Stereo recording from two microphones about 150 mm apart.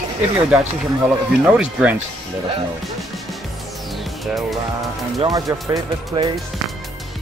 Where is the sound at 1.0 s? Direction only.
5° right (ahead or behind).